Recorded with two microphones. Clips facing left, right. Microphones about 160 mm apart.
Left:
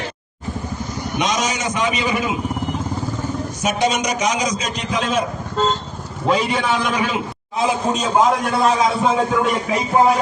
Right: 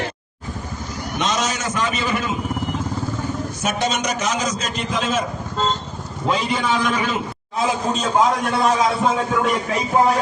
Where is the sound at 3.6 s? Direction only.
15° left (ahead or behind).